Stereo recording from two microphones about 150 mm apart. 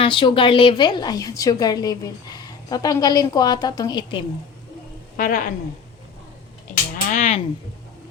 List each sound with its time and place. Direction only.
0.0 s a woman's voice: 35° left (ahead or behind)
5.1 s a woman's voice: 65° left (ahead or behind)
6.9 s speech: 55° left (ahead or behind)